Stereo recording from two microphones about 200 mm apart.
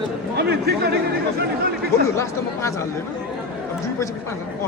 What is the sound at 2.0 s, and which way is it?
Speech, 15° left (ahead or behind).